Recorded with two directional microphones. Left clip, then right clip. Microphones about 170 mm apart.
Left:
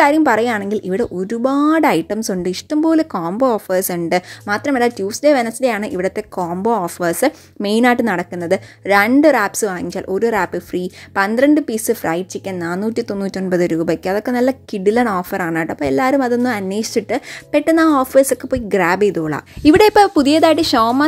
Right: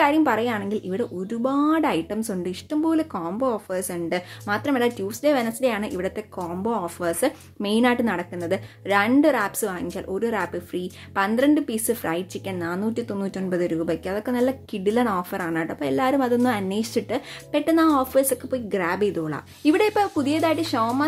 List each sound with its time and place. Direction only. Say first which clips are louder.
0.0 s a woman's voice: left 7 dB; 35° left (ahead or behind)